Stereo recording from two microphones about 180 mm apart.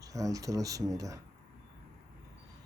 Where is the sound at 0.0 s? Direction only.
20° right (ahead or behind).